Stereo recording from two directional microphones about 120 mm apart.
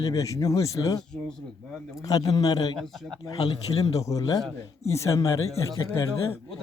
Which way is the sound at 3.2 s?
30° left (ahead or behind).